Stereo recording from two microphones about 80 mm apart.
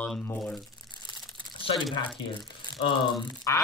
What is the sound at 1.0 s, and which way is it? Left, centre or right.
Crumpling, left.